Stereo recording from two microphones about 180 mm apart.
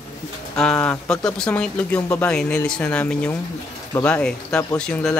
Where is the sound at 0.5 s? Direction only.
5° left (ahead or behind).